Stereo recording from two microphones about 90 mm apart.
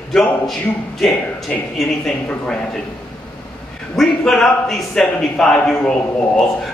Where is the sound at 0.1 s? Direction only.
5° left (ahead or behind).